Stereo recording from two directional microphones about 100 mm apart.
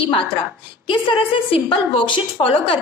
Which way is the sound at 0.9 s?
55° left (ahead or behind).